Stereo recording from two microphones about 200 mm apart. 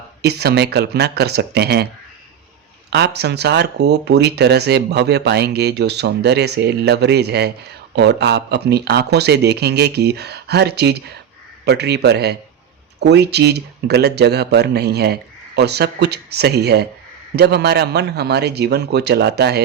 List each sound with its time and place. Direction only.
0.2 s speech: 55° right (ahead or behind)
2.9 s speech: 55° right (ahead or behind)